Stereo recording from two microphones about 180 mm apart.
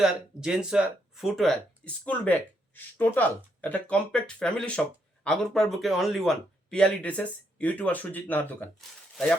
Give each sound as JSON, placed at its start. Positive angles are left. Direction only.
{"t": 0.0, "sound": "speech", "side_deg": -5}